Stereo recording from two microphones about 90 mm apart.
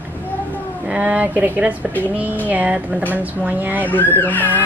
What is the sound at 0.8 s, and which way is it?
A woman's voice, 15° right (ahead or behind).